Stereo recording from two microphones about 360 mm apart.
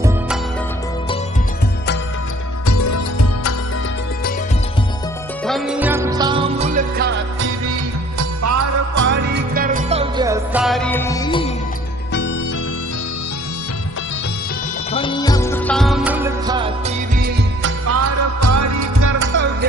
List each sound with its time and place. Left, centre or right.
2.6 s music: left
5.5 s music: centre; by 7.8 s right
8.2 s music: right
9.1 s music: right; by 11.5 s centre
14.9 s music: centre; by 17.7 s right
17.8 s music: right